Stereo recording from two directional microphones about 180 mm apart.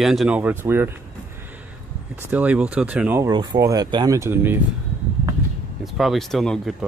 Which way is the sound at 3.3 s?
25° right (ahead or behind).